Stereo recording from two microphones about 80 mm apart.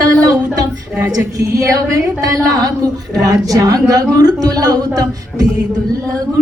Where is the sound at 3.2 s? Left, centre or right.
Right.